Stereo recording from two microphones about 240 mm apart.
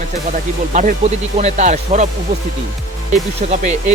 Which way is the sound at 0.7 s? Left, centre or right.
Right.